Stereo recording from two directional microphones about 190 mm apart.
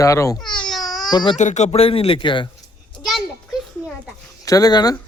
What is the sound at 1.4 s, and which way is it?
Speech, 40° left (ahead or behind).